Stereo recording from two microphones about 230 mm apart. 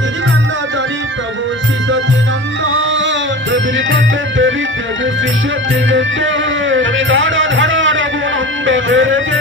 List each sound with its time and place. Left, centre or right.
3.5 s music: right
5.9 s music: right